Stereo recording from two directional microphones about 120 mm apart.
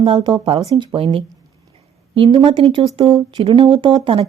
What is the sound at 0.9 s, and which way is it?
A woman's voice, 50° right (ahead or behind).